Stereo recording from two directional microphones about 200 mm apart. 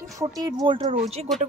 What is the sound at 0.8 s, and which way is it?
Speech, 30° right (ahead or behind).